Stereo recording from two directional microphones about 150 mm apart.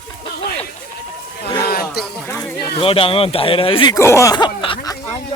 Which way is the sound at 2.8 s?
35° left (ahead or behind).